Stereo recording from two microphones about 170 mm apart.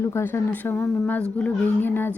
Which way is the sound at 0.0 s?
15° left (ahead or behind).